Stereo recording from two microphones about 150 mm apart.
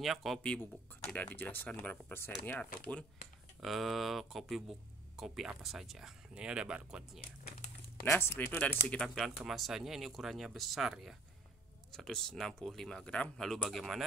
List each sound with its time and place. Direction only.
0.0 s speech: centre (ahead or behind)
3.6 s speech: centre (ahead or behind)
8.0 s speech: 15° left (ahead or behind)